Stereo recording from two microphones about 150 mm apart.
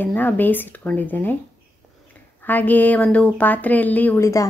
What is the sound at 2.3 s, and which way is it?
A woman's voice, 10° left (ahead or behind).